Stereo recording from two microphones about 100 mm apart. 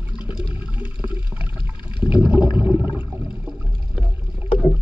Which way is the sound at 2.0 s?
15° right (ahead or behind).